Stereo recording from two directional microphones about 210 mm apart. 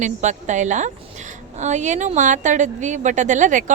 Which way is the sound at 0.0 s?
35° right (ahead or behind).